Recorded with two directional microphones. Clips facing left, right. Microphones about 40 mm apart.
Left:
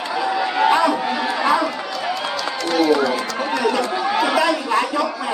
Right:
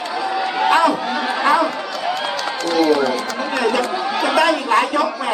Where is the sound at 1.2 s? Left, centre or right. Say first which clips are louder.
Right 1 dB; centre.